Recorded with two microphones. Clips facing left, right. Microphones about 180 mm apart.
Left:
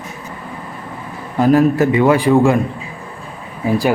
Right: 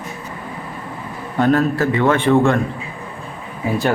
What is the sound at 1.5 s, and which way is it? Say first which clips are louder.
Speech: left 5 dB; 20° left (ahead or behind).